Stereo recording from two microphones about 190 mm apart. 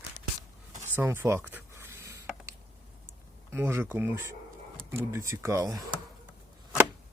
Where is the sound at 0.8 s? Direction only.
15° right (ahead or behind).